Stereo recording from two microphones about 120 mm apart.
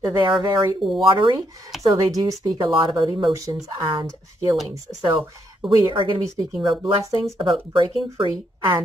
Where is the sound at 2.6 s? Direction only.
45° right (ahead or behind).